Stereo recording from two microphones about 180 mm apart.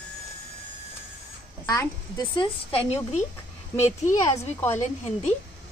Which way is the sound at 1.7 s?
25° left (ahead or behind).